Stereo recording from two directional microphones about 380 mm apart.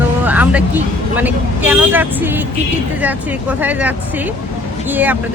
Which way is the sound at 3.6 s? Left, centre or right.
Centre.